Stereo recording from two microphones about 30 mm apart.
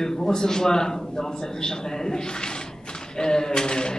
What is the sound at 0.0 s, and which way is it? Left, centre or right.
Speech, centre.